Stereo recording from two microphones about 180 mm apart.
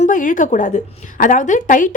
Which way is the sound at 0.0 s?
45° left (ahead or behind).